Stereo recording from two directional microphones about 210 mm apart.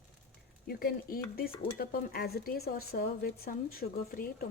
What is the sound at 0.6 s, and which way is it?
Stir, 45° left (ahead or behind).